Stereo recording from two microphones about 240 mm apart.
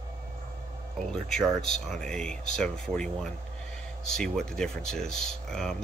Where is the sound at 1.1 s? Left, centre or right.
Centre.